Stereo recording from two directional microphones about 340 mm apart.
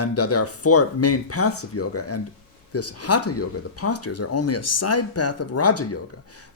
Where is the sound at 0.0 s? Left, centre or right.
Left.